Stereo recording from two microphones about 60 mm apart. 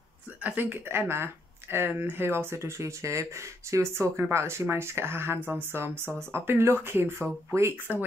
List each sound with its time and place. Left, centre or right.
0.4 s speech: right
7.5 s speech: right